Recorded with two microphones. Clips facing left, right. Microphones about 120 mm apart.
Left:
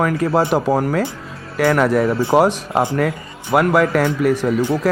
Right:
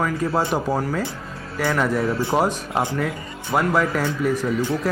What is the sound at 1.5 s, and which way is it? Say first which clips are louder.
Speech: left 6 dB; 65° left (ahead or behind).